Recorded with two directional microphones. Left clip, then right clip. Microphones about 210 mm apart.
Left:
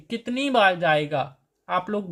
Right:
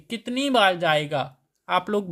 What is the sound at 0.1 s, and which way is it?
Speech, 15° right (ahead or behind).